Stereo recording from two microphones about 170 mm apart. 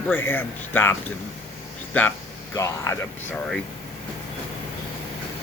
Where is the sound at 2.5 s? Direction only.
20° left (ahead or behind).